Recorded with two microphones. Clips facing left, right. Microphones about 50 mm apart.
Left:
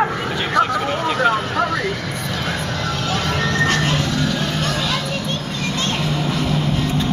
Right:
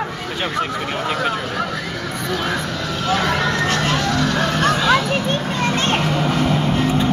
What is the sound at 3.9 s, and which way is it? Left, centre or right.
Music, right.